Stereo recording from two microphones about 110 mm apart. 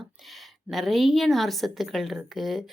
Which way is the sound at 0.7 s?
Centre (ahead or behind).